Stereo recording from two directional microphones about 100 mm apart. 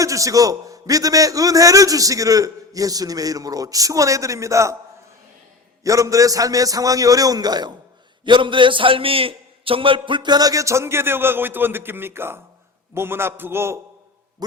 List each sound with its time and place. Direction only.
0.0 s a man's voice: 35° right (ahead or behind)
5.8 s a man's voice: 35° right (ahead or behind)
8.2 s a man's voice: 55° right (ahead or behind); by 13.7 s 25° right (ahead or behind)